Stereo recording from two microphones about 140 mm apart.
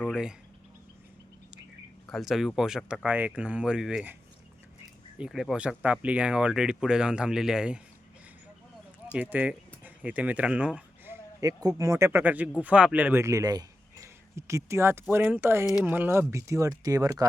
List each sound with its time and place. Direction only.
0.1 s speech: 5° right (ahead or behind)
2.0 s speech: centre (ahead or behind)
9.1 s speech: 10° right (ahead or behind)